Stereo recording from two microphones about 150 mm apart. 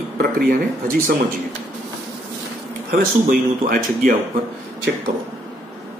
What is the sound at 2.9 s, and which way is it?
Speech, 65° right (ahead or behind).